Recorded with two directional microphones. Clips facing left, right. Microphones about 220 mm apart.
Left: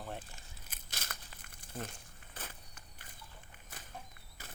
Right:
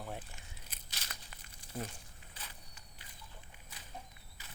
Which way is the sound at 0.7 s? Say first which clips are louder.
Left 4 dB; 50° left (ahead or behind).